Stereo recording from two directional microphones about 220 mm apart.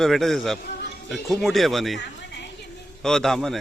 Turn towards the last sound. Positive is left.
turn(degrees=0)  # may be behind; listen again after turning